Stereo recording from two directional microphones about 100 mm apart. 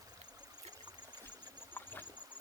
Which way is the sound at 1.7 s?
20° left (ahead or behind).